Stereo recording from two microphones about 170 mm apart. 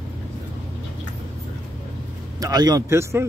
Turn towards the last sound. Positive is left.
turn(degrees=-15)  # may be behind; listen again after turning